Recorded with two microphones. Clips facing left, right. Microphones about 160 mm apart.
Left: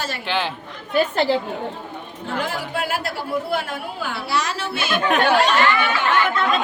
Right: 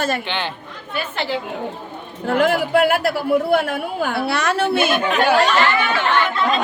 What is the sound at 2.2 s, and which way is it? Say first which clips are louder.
A man's voice: right 9 dB; 65° right (ahead or behind).